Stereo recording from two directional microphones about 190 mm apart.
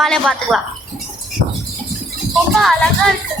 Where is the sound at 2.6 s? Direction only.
Centre (ahead or behind).